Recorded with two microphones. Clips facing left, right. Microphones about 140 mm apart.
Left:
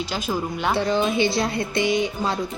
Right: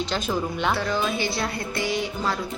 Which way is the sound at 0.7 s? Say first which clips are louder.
Left 6 dB; 20° left (ahead or behind).